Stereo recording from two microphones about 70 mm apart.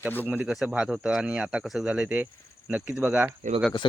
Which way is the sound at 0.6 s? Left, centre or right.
Centre.